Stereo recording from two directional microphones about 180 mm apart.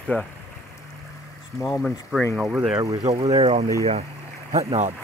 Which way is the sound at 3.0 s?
35° right (ahead or behind).